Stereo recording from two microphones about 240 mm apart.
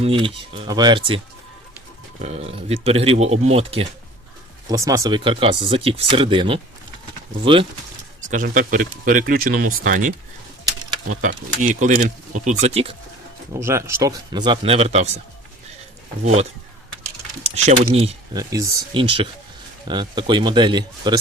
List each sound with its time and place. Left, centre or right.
0.0 s speech: right
2.2 s speech: right
8.3 s speech: right
11.1 s speech: right
13.5 s a man's voice: centre; by 15.2 s right
16.2 s speech: right